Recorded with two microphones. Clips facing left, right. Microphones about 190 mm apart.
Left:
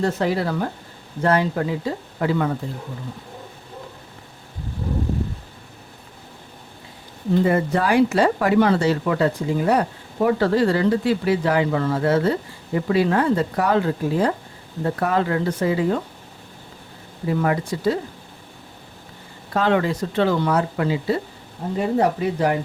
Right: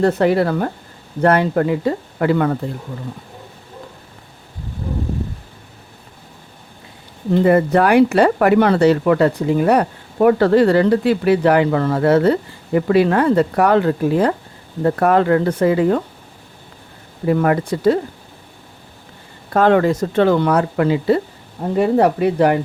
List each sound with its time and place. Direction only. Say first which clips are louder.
0.0 s speech: right 7 dB; 60° right (ahead or behind)
7.4 s speech: right 9 dB; 65° right (ahead or behind)
17.2 s speech: right 5 dB; 60° right (ahead or behind)
19.5 s speech: right 6 dB; 50° right (ahead or behind)